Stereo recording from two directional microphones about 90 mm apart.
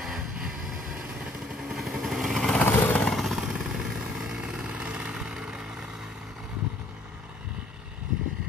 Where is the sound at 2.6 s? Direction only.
20° left (ahead or behind).